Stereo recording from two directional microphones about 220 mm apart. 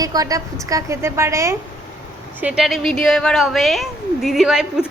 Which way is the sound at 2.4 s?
Centre (ahead or behind).